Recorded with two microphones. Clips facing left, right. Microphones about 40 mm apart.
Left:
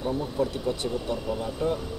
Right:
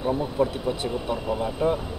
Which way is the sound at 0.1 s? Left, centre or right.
Centre.